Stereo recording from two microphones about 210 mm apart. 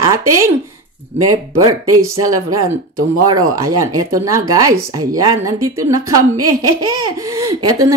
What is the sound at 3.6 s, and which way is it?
A woman's voice, 15° right (ahead or behind).